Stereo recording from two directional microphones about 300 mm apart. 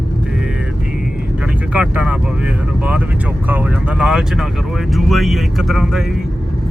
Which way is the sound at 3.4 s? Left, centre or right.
Centre.